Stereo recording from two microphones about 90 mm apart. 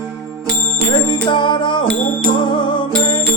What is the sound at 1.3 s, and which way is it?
Music, 60° left (ahead or behind).